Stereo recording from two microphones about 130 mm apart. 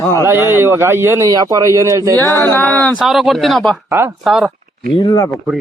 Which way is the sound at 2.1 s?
15° left (ahead or behind).